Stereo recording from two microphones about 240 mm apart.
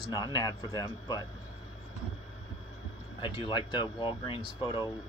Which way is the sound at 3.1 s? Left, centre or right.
Centre.